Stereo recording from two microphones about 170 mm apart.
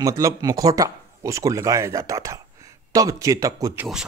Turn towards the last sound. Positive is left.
turn(degrees=-20)  # may be behind; listen again after turning